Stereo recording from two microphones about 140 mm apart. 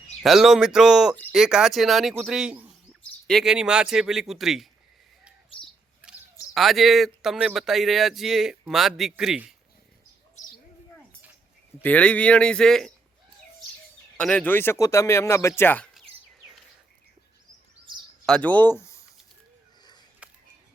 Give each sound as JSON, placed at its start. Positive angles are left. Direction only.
{"t": 0.2, "sound": "speech", "side_deg": 0}
{"t": 6.5, "sound": "speech", "side_deg": 0}
{"t": 11.8, "sound": "speech", "side_deg": 10}
{"t": 14.2, "sound": "speech", "side_deg": 10}
{"t": 18.3, "sound": "speech", "side_deg": 10}